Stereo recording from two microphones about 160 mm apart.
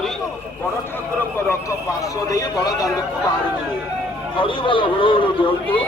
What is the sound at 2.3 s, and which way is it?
Speech, 20° left (ahead or behind).